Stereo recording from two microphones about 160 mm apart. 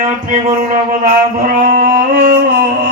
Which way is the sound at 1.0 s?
60° right (ahead or behind).